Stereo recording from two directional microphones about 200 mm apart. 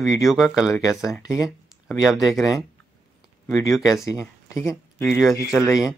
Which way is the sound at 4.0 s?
15° left (ahead or behind).